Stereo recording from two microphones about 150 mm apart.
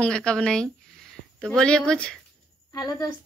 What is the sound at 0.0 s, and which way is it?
Speech, 5° left (ahead or behind).